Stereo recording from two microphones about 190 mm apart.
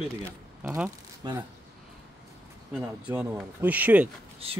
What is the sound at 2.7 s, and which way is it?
Speech, 10° right (ahead or behind).